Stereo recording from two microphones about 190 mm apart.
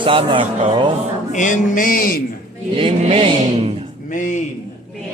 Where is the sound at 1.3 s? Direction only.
40° left (ahead or behind).